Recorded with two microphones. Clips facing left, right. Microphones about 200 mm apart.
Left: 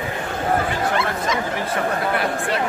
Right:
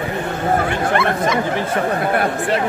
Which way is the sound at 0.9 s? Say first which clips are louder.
Right 5 dB; 60° right (ahead or behind).